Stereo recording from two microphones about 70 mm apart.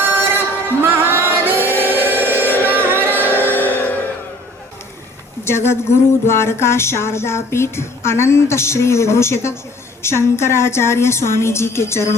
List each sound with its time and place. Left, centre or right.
0.0 s music: right
3.4 s music: left
5.5 s a sound: left